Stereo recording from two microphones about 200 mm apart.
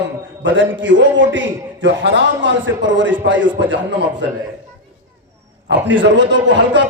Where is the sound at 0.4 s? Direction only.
70° right (ahead or behind).